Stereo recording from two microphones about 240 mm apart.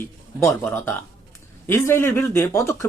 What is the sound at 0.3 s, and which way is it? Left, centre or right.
Speech, centre.